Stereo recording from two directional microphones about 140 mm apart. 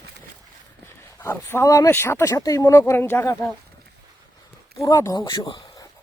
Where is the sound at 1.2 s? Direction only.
15° left (ahead or behind).